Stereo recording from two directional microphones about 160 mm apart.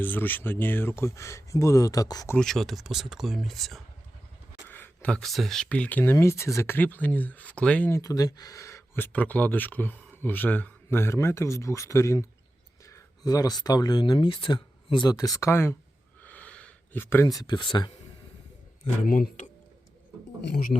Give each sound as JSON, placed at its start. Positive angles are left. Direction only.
{"t": 0.0, "sound": "speech", "side_deg": 10}
{"t": 2.3, "sound": "speech", "side_deg": 5}
{"t": 16.2, "sound": "a sound", "side_deg": 10}
{"t": 19.0, "sound": "speech", "side_deg": 60}
{"t": 20.5, "sound": "speech", "side_deg": 60}